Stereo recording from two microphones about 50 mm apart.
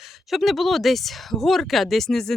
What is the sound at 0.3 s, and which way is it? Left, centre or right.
Speech, centre.